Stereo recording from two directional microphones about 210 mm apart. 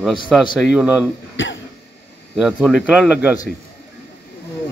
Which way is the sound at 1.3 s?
60° left (ahead or behind).